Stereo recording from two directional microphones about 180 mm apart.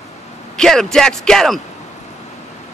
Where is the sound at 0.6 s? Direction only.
5° left (ahead or behind).